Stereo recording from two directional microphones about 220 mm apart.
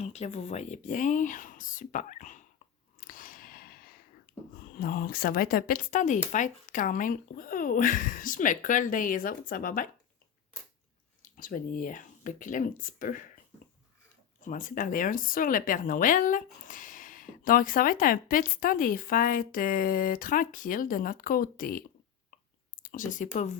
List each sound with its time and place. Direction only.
0.0 s speech: 30° left (ahead or behind)
3.0 s a sound: 40° left (ahead or behind)
4.5 s speech: 40° left (ahead or behind)
11.2 s speech: 40° left (ahead or behind)
14.4 s speech: 35° left (ahead or behind)